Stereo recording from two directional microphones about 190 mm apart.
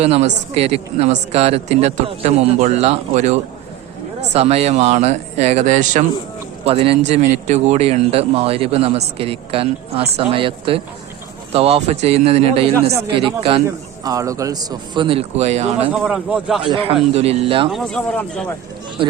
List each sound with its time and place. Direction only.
0.0 s a man's voice: 35° right (ahead or behind)
14.0 s a man's voice: 20° right (ahead or behind); by 15.7 s 35° right (ahead or behind)
15.9 s a man's voice: 5° right (ahead or behind)
16.6 s a man's voice: 30° right (ahead or behind)
17.7 s a man's voice: centre (ahead or behind)